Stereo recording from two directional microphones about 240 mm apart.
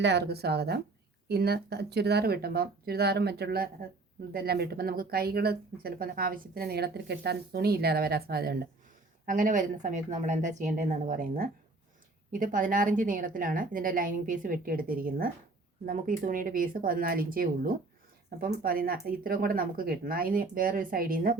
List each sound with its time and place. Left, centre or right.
0.0 s speech: right